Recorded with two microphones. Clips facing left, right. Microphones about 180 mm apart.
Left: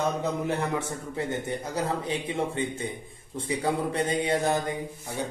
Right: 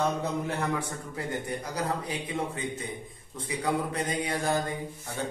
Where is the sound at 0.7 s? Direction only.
25° left (ahead or behind).